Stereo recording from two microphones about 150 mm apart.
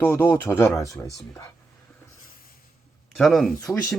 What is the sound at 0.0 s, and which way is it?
Speech, 15° left (ahead or behind).